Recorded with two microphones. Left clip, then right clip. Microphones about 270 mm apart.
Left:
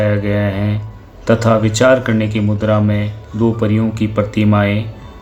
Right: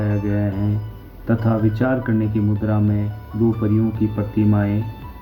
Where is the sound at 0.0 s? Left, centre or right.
Left.